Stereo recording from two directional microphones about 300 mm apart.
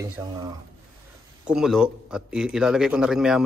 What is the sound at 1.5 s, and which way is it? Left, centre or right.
A man's voice, centre.